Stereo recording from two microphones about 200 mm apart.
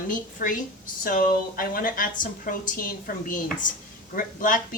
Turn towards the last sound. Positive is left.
turn(degrees=45)  # may be behind; listen again after turning